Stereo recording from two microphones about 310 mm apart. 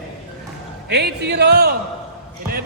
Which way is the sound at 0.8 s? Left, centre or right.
Right.